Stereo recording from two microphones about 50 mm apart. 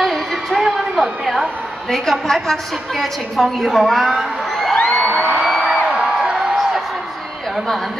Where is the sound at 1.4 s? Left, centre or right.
Centre.